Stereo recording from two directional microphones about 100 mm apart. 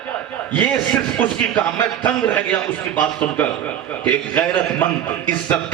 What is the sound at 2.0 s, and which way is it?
Speech, 15° left (ahead or behind).